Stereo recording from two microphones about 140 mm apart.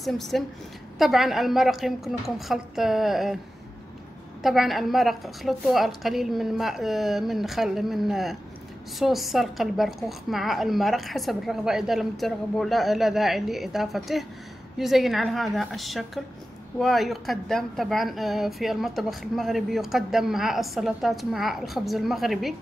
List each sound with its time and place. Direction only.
0.0 s a woman's voice: centre (ahead or behind)
4.4 s a woman's voice: centre (ahead or behind)